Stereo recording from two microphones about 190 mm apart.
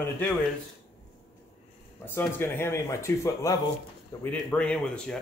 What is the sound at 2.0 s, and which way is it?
Speech, 10° left (ahead or behind).